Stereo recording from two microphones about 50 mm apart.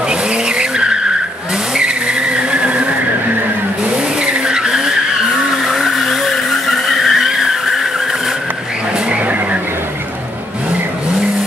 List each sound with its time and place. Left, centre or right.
0.1 s vehicle: centre
4.2 s vehicle: centre
5.7 s vehicle: centre
9.1 s vehicle: right